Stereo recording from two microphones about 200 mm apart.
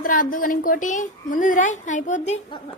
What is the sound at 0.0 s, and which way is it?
A woman's voice, 45° left (ahead or behind).